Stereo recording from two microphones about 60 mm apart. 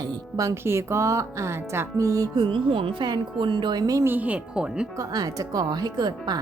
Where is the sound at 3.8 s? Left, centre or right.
Right.